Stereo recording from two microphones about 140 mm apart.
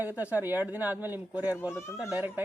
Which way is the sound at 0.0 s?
10° right (ahead or behind).